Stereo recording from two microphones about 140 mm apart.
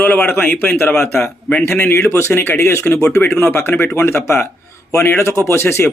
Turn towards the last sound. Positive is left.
turn(degrees=15)  # may be behind; listen again after turning